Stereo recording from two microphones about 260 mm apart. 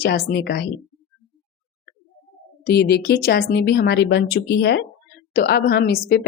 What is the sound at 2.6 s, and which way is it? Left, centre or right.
A woman's voice, left.